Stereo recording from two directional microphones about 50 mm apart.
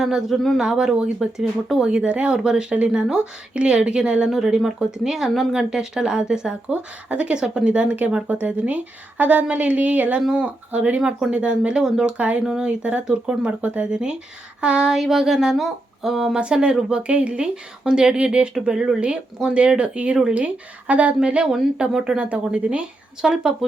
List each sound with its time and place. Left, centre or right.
0.0 s speech: centre
1.9 s speech: right
4.3 s speech: centre
7.1 s speech: right
10.2 s speech: centre
10.7 s speech: right
11.0 s speech: centre
11.8 s speech: centre
16.4 s speech: centre
21.4 s speech: centre
22.2 s speech: right
23.2 s speech: centre